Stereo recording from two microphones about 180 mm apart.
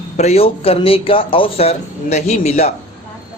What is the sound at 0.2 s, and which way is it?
Speech, 35° left (ahead or behind).